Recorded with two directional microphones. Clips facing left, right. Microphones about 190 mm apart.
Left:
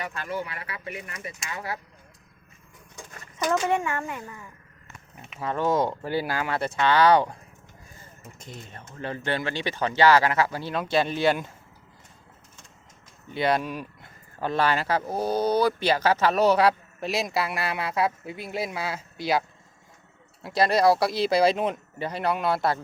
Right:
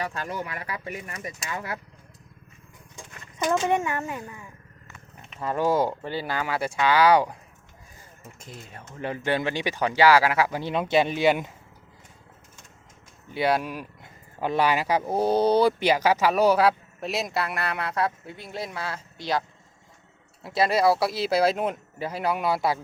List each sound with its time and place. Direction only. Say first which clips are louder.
0.0 s speech: right 1 dB; 35° right (ahead or behind)
3.3 s speech: right 1 dB; 15° right (ahead or behind)
5.3 s mechanisms: right 1 dB; 5° left (ahead or behind)
5.5 s speech: right 1 dB; 5° right (ahead or behind)
6.1 s speech: left 3 dB; 10° left (ahead or behind)
6.4 s speech: even; 5° right (ahead or behind)
8.4 s speech: left 1 dB; 5° right (ahead or behind)
13.3 s speech: even; 10° right (ahead or behind); by 19.5 s 10° left (ahead or behind)
20.4 s speech: left 1 dB; 5° right (ahead or behind)